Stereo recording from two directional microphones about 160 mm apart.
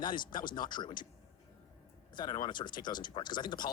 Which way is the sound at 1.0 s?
60° left (ahead or behind).